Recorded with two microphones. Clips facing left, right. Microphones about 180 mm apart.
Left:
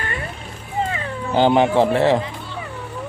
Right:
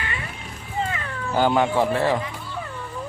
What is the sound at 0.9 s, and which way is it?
Speech, 25° left (ahead or behind).